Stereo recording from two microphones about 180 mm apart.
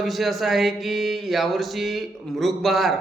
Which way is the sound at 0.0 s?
Centre (ahead or behind).